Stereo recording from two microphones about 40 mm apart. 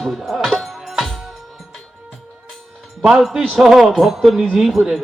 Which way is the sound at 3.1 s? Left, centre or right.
Centre.